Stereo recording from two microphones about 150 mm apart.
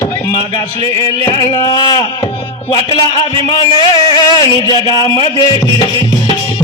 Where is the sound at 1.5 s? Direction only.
30° left (ahead or behind).